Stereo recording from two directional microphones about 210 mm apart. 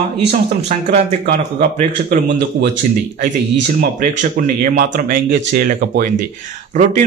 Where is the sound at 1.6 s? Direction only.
40° right (ahead or behind).